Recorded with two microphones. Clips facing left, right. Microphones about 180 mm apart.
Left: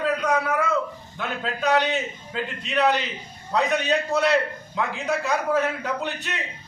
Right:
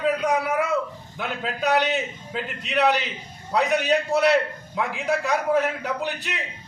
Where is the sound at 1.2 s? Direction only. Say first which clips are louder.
Even; centre (ahead or behind).